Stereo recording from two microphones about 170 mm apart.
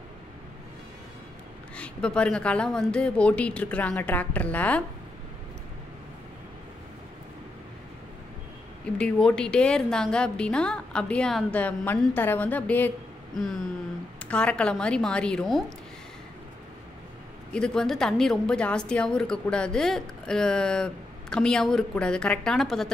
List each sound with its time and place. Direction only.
1.8 s a woman's voice: 5° left (ahead or behind)
8.9 s a woman's voice: 5° left (ahead or behind)
13.3 s a sound: centre (ahead or behind)
14.2 s a woman's voice: 5° left (ahead or behind)
17.5 s a woman's voice: 5° left (ahead or behind)